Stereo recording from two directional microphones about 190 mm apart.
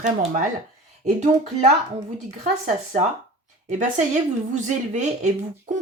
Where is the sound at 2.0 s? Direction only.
40° right (ahead or behind).